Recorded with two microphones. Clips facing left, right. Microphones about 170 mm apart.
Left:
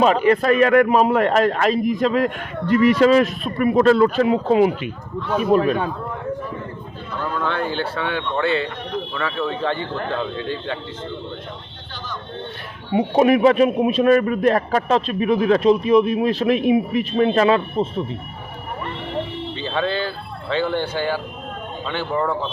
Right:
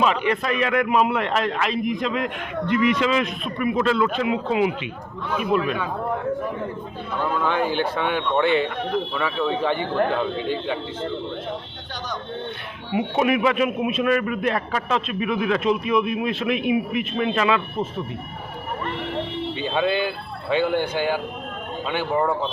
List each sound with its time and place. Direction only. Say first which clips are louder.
0.0 s a man's voice: left 6 dB; 40° left (ahead or behind)
7.3 s speech: right 1 dB; 10° right (ahead or behind)
12.9 s speech: left 5 dB; 35° left (ahead or behind)
19.5 s speech: even; 15° right (ahead or behind)